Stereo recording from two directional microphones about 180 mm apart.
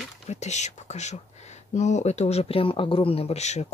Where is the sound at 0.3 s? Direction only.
40° left (ahead or behind).